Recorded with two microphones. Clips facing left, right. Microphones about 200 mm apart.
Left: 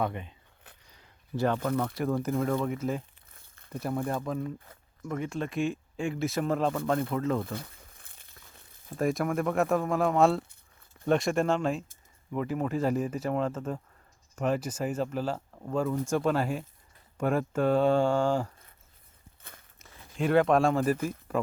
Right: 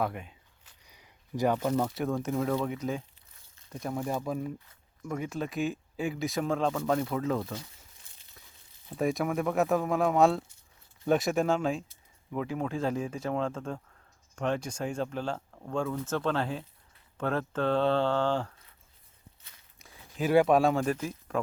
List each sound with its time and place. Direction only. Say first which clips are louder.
0.0 s speech: left 1 dB; 5° right (ahead or behind)
0.9 s a sound: left 1 dB; 10° right (ahead or behind)
1.8 s speech: left 1 dB; centre (ahead or behind)
4.0 s speech: left 1 dB; 5° right (ahead or behind)
7.4 s crumpling: left 2 dB; 55° left (ahead or behind)
9.0 s speech: left 1 dB; centre (ahead or behind)
19.4 s walk: left 9 dB; 55° left (ahead or behind)
19.8 s speech: left 1 dB; 5° right (ahead or behind)